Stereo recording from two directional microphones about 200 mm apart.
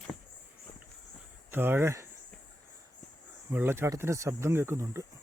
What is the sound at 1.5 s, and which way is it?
Speech, 10° right (ahead or behind).